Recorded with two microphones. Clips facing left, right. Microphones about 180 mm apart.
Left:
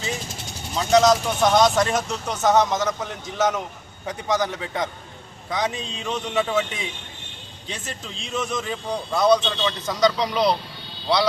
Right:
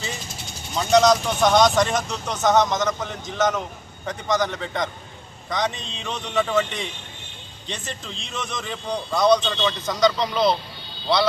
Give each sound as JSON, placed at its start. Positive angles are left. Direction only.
{"t": 0.7, "sound": "a man's voice", "side_deg": 0}